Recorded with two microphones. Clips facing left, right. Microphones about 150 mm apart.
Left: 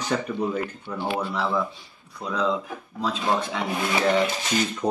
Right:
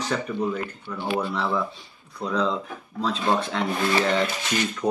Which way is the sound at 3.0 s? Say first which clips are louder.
Right 1 dB; 10° left (ahead or behind).